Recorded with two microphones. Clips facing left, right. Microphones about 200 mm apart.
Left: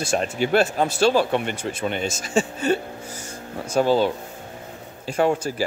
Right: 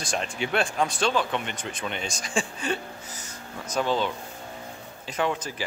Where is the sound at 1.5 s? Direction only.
10° left (ahead or behind).